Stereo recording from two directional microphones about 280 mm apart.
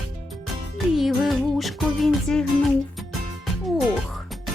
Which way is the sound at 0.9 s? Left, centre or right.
Centre.